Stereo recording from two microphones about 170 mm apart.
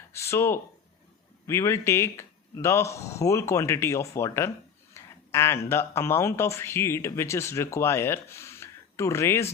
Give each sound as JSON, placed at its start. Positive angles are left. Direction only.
{"t": 0.1, "sound": "speech", "side_deg": 15}